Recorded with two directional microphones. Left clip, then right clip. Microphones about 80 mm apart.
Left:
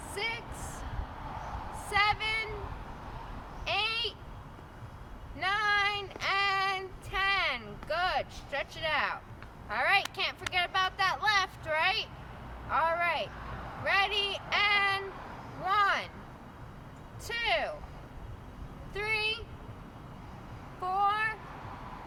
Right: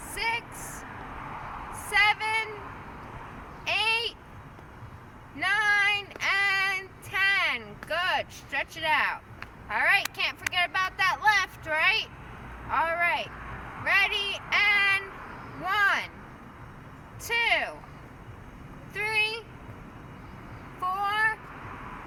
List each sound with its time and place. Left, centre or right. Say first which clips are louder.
0.1 s a sound: right 6 dB; left
3.6 s a sound: right 5 dB; left
5.4 s female singing: right 4 dB; left
7.9 s speech: right 3 dB; left
9.6 s speech: right 4 dB; left
13.5 s vehicle: right 2 dB; left
13.8 s speech: right 4 dB; left
14.5 s speech: right 5 dB; left
15.3 s a sound: right 1 dB; left
17.2 s speech: right 5 dB; left
20.8 s child singing: right 3 dB; left